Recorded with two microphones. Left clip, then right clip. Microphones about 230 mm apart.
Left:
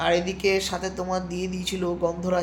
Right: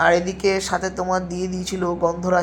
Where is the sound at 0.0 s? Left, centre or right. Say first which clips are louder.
Right 5 dB; centre.